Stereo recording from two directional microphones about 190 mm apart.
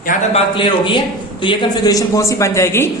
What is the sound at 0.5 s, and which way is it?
A man's voice, 25° left (ahead or behind).